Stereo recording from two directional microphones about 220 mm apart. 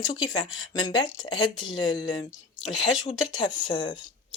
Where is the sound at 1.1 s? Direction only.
60° left (ahead or behind).